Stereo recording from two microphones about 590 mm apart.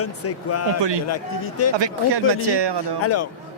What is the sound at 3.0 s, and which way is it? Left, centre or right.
Speech, left.